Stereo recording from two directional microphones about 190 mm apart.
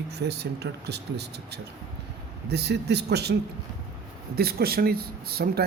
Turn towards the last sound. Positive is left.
turn(degrees=-55)  # may be behind; listen again after turning